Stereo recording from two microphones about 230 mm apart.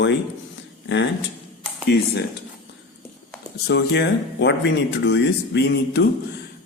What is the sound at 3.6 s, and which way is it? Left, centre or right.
Speech, left.